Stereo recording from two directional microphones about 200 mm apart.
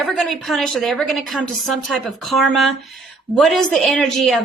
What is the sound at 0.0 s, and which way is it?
A woman's voice, centre (ahead or behind).